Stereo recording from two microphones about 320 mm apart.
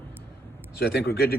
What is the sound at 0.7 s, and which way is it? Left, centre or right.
Speech, left.